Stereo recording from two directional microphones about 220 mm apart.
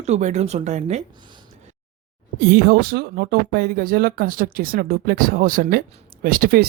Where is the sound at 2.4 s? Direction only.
45° right (ahead or behind).